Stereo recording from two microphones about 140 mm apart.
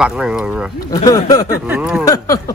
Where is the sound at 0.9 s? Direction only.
25° left (ahead or behind).